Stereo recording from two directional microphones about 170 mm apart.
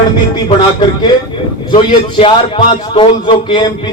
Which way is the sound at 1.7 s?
30° left (ahead or behind).